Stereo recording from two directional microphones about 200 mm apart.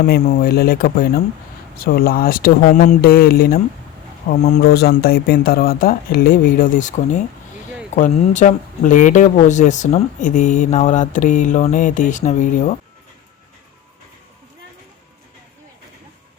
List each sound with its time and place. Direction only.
0.0 s speech: 50° left (ahead or behind)
4.7 s speech: 50° left (ahead or behind)